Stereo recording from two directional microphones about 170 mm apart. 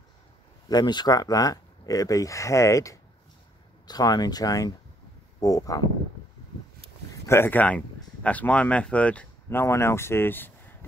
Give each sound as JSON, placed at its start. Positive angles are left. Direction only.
{"t": 0.7, "sound": "speech", "side_deg": 25}
{"t": 7.2, "sound": "speech", "side_deg": 15}